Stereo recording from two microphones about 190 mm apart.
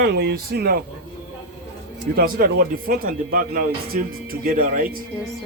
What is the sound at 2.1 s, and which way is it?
Speech, 50° right (ahead or behind).